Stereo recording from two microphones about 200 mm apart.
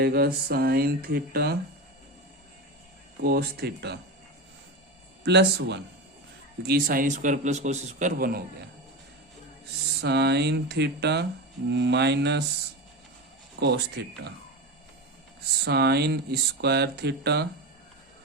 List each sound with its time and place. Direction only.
0.0 s mantra: 50° right (ahead or behind)
3.2 s mantra: 55° right (ahead or behind)
5.2 s a man's voice: 55° right (ahead or behind)
10.0 s speech: 55° right (ahead or behind)
13.6 s speech: 55° right (ahead or behind)
15.6 s speech: 55° right (ahead or behind)